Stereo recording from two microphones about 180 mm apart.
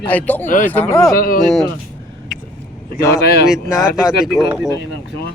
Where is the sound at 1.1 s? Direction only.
50° left (ahead or behind).